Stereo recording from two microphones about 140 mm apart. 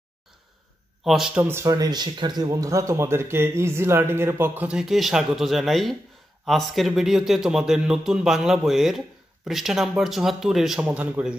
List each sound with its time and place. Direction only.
1.0 s a man's voice: 5° right (ahead or behind)